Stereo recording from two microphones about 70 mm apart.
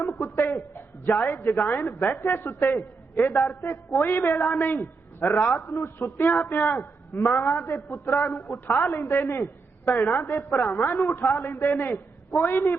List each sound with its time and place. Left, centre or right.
0.0 s a woman's voice: left